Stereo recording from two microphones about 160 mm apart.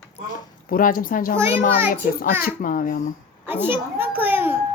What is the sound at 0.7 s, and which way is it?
Speech, 60° left (ahead or behind).